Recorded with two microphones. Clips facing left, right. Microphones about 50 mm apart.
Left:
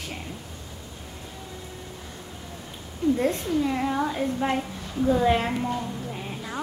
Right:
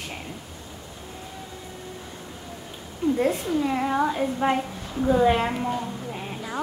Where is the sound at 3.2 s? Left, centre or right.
Centre.